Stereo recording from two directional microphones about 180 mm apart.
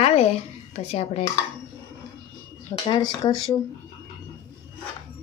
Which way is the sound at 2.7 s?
25° left (ahead or behind).